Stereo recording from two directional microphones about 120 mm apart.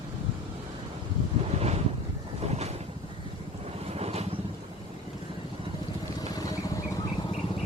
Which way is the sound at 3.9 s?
60° right (ahead or behind).